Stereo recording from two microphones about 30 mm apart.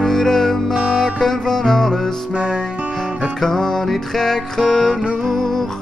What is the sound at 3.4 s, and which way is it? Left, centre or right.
Music, centre.